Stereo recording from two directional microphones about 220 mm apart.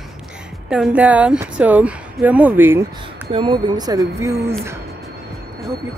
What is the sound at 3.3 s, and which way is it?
Speech, 20° right (ahead or behind).